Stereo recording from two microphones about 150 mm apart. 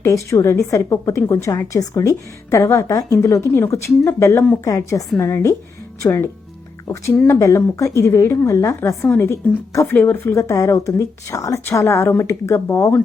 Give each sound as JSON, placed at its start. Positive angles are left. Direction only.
{"t": 0.0, "sound": "a woman's voice", "side_deg": 20}